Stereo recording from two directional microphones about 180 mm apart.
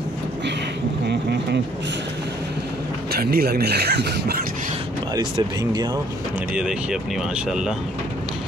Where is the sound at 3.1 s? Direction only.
60° right (ahead or behind).